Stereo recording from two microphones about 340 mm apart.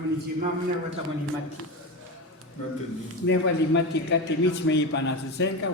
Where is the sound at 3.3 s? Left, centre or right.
Left.